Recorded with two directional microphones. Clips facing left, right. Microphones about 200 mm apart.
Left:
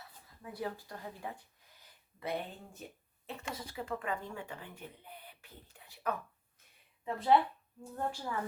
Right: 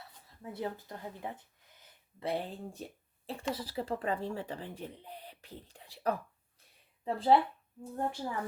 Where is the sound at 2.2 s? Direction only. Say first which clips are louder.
Right 3 dB; 30° right (ahead or behind).